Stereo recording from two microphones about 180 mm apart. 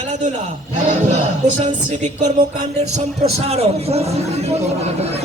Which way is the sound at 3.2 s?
35° right (ahead or behind).